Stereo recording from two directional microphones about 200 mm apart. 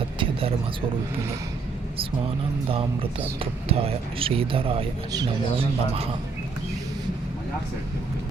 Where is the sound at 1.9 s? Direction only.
25° right (ahead or behind).